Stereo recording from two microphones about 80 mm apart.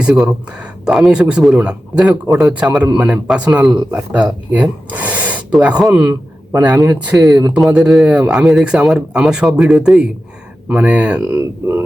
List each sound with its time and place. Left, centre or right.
0.0 s speech: centre
7.2 s speech: right
7.7 s speech: centre